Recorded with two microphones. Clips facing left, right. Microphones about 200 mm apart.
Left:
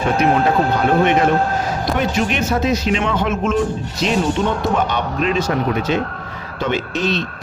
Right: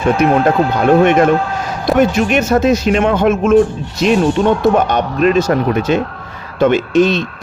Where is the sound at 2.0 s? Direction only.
50° right (ahead or behind).